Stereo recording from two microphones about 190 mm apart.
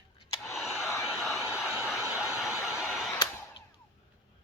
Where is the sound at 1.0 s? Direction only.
Centre (ahead or behind).